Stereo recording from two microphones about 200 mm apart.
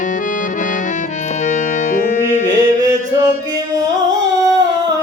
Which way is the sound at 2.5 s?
20° right (ahead or behind).